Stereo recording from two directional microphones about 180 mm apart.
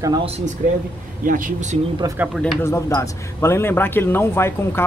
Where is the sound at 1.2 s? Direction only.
45° right (ahead or behind).